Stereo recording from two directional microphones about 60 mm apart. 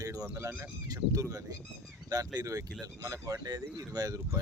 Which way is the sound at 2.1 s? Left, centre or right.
Right.